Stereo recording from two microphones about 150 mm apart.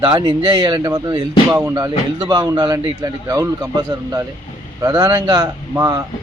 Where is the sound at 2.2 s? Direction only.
25° right (ahead or behind).